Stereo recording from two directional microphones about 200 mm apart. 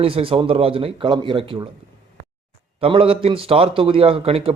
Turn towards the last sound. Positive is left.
turn(degrees=-30)  # may be behind; listen again after turning